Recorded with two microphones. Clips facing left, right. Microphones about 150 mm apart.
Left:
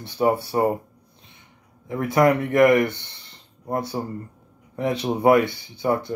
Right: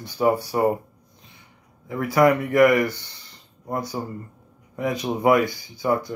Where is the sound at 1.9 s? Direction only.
25° left (ahead or behind).